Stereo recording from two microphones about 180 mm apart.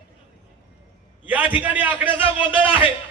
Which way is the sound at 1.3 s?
10° right (ahead or behind).